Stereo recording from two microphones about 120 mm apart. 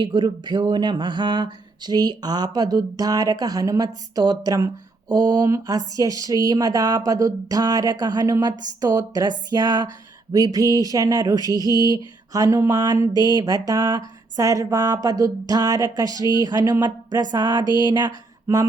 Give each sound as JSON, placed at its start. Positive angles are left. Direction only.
{"t": 0.0, "sound": "speech", "side_deg": -40}